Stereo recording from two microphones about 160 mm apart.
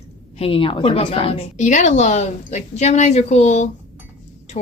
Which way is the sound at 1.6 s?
50° left (ahead or behind).